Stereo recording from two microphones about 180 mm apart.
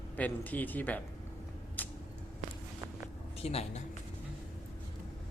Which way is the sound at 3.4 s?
35° left (ahead or behind).